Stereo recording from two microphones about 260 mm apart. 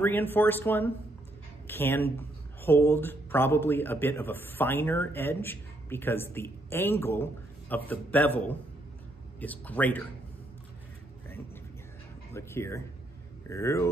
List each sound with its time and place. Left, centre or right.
0.0 s speech: centre
12.4 s speech: centre